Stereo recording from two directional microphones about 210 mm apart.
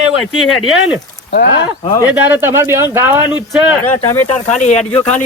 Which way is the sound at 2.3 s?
10° right (ahead or behind).